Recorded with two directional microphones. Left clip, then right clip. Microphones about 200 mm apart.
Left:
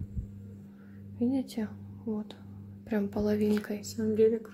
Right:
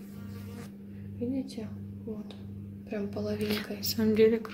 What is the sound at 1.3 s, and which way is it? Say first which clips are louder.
Speech: left 3 dB; 55° left (ahead or behind).